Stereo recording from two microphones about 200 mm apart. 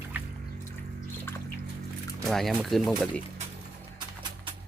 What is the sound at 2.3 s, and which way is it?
Speech, centre (ahead or behind).